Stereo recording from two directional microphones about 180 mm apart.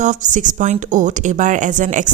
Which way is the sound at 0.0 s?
45° right (ahead or behind).